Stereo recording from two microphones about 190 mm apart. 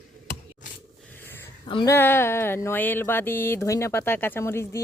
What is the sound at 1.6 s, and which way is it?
Mantra, 20° left (ahead or behind).